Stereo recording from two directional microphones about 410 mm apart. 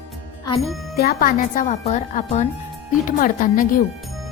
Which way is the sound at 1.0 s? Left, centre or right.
Left.